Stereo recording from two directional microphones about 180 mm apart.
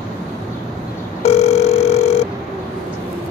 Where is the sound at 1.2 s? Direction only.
35° left (ahead or behind).